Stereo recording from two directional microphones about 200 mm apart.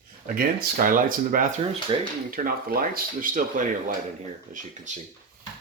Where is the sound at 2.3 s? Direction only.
45° right (ahead or behind).